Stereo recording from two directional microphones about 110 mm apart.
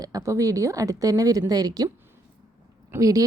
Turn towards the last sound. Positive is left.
turn(degrees=-30)  # may be behind; listen again after turning